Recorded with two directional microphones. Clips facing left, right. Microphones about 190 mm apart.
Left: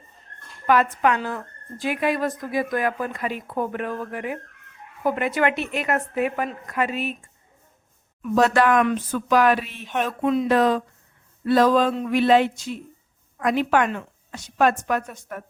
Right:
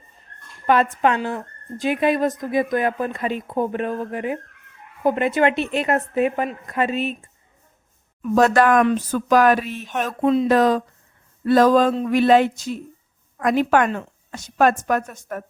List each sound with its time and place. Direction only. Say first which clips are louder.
0.7 s speech: right 2 dB; 25° right (ahead or behind)
8.2 s a woman's voice: right 3 dB; 45° right (ahead or behind)